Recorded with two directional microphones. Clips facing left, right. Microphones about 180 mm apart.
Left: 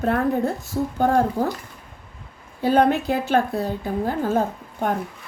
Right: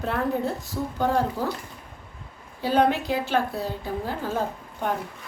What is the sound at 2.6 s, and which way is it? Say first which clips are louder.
A woman's voice: left 4 dB; 50° left (ahead or behind).